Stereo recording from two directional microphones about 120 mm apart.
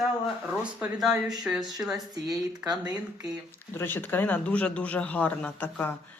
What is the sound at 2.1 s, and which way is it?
Speech, 35° right (ahead or behind).